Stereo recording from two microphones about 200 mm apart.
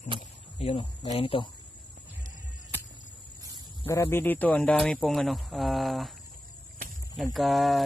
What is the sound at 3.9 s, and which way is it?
Speech, 10° left (ahead or behind).